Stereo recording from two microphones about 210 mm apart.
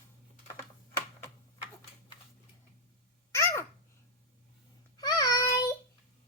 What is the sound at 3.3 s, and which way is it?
Babbling, 10° left (ahead or behind).